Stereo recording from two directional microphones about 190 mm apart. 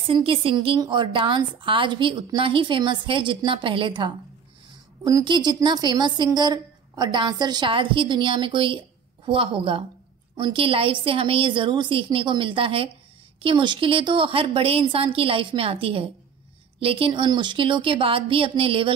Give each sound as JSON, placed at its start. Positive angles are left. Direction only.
{"t": 0.1, "sound": "a woman's voice", "side_deg": -30}